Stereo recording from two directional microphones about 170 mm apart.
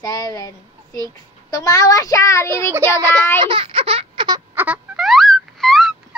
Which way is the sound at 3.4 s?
30° right (ahead or behind).